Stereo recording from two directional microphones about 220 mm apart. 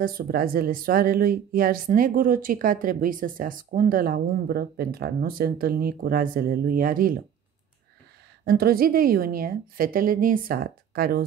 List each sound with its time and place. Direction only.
0.0 s speech: 40° right (ahead or behind)
8.5 s speech: 45° right (ahead or behind)